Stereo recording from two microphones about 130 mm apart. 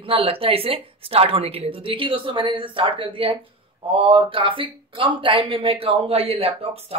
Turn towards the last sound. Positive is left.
turn(degrees=-50)  # may be behind; listen again after turning